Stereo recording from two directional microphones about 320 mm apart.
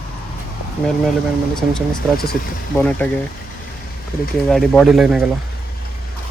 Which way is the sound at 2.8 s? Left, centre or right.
Centre.